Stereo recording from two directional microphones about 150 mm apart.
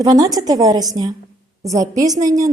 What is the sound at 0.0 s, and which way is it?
Speech, 25° right (ahead or behind).